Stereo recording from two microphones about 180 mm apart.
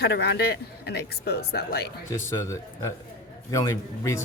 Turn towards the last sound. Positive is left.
turn(degrees=15)  # may be behind; listen again after turning